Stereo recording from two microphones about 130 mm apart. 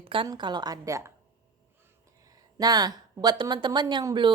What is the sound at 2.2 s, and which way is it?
A woman's voice, 30° right (ahead or behind).